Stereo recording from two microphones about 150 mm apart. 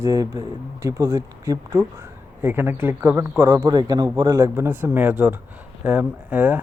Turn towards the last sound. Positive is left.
turn(degrees=-10)  # may be behind; listen again after turning